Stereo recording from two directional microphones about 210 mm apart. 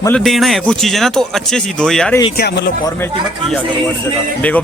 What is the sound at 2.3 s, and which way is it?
Speech, 50° left (ahead or behind).